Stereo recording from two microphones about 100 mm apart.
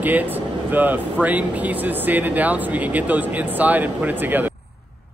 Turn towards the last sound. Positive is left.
turn(degrees=-15)  # may be behind; listen again after turning